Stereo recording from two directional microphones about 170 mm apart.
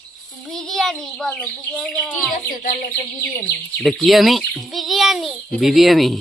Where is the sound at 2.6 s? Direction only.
55° left (ahead or behind).